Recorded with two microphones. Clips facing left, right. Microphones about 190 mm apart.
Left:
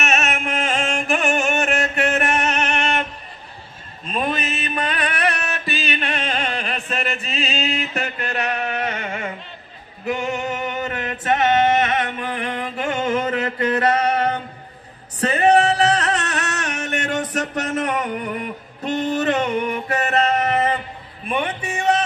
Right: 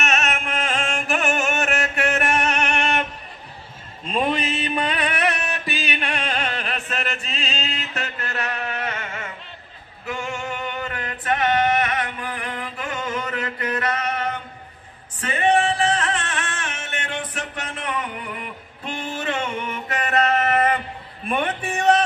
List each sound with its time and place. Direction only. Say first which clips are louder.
0.0 s music: left 2 dB; 5° left (ahead or behind); by 3.1 s 15° right (ahead or behind)
4.0 s a sound: right 1 dB; 25° right (ahead or behind)
5.1 s chant: left 1 dB; 20° right (ahead or behind); by 9.3 s 15° left (ahead or behind)
10.0 s male singing: left 5 dB; 20° left (ahead or behind)
15.1 s music: left 4 dB; 40° left (ahead or behind)